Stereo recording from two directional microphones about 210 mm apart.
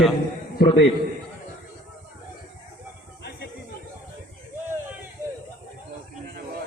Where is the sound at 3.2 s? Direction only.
50° left (ahead or behind).